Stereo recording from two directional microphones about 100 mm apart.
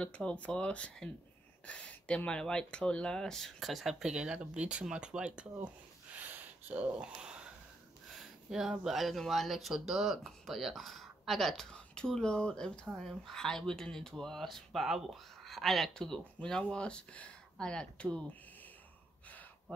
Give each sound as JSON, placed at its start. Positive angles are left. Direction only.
{"t": 0.0, "sound": "speech", "side_deg": 10}
{"t": 6.1, "sound": "a sound", "side_deg": -15}
{"t": 8.1, "sound": "speech", "side_deg": 0}